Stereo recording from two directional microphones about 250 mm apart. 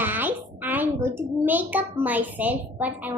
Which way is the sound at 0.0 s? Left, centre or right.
Centre.